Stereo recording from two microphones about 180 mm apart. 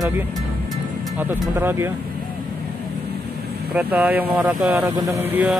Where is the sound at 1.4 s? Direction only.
10° right (ahead or behind).